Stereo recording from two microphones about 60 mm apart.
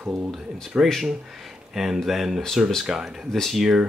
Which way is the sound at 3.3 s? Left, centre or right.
Centre.